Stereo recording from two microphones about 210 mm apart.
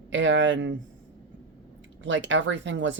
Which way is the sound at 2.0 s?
60° right (ahead or behind).